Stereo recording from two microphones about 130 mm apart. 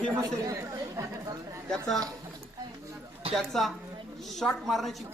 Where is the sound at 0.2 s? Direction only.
25° right (ahead or behind).